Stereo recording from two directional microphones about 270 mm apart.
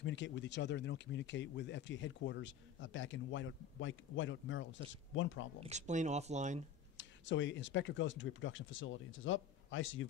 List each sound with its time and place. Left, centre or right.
0.0 s speech: left
5.6 s speech: right
7.0 s speech: left